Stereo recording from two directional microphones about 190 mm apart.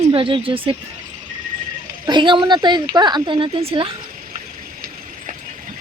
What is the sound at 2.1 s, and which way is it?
Speech, 25° right (ahead or behind).